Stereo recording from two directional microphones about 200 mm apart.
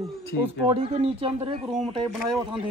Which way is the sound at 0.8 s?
25° right (ahead or behind).